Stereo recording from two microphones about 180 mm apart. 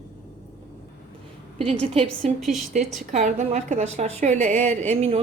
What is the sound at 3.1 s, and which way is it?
A woman's voice, 40° right (ahead or behind).